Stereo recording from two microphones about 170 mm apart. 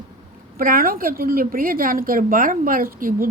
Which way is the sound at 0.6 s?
55° right (ahead or behind).